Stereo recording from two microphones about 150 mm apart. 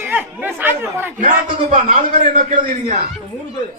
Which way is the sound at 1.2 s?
55° right (ahead or behind).